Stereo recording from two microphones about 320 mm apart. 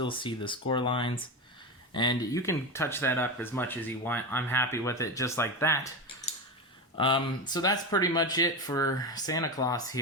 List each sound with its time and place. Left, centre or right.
0.0 s speech: centre
6.9 s speech: centre